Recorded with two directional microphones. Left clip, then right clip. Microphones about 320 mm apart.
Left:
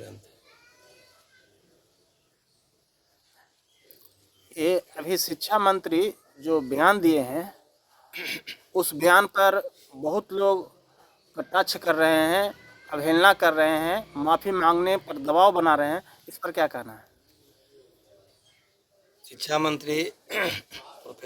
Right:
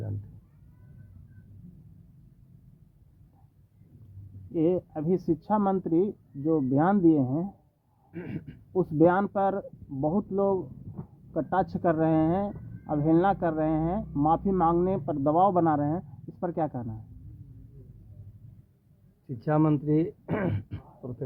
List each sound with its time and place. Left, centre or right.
4.5 s speech: centre
19.4 s speech: centre